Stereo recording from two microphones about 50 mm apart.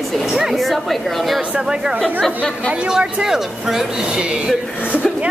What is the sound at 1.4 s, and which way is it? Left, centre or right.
A woman's voice, centre.